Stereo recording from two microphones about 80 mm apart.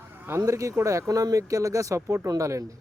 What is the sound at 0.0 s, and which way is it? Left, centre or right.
Speech, right.